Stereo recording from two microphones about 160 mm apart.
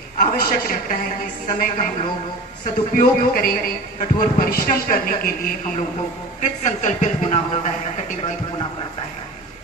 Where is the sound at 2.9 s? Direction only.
65° left (ahead or behind).